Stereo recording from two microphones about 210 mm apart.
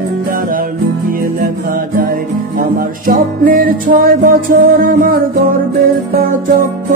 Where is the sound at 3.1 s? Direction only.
45° right (ahead or behind).